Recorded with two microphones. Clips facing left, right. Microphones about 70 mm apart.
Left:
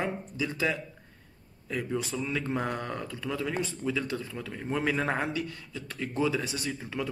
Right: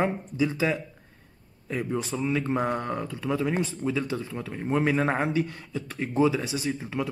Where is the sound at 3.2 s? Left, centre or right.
Right.